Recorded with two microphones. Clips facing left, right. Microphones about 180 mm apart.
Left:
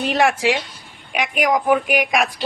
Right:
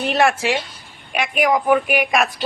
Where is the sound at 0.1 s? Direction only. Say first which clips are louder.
Even; 15° left (ahead or behind).